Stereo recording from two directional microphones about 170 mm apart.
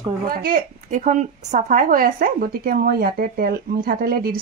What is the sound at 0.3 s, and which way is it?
A woman's voice, 55° right (ahead or behind).